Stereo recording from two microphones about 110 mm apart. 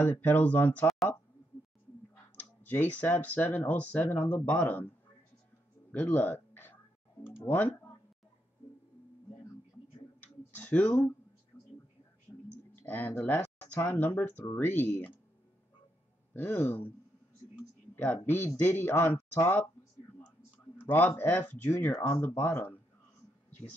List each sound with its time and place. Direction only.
0.0 s speech: 15° left (ahead or behind)
2.3 s speech: 15° left (ahead or behind)
5.9 s a sound: 15° left (ahead or behind)
7.4 s speech: 15° left (ahead or behind)
10.2 s tick-tock: 15° left (ahead or behind)
11.5 s a sound: 25° left (ahead or behind)
12.7 s speech: 15° left (ahead or behind)
16.3 s speech: 20° left (ahead or behind)
17.9 s speech: 15° left (ahead or behind)
20.8 s speech: 15° left (ahead or behind)